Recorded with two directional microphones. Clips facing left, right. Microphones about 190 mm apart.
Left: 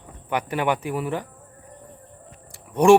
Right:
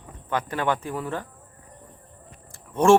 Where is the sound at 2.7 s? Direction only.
15° left (ahead or behind).